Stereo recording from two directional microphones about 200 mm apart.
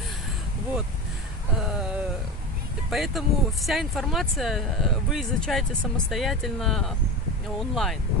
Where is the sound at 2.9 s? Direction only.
Centre (ahead or behind).